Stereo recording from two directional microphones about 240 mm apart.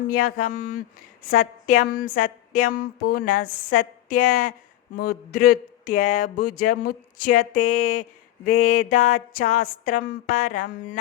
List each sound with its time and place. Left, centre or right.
0.1 s speech: left
8.5 s mantra: left
8.9 s speech: left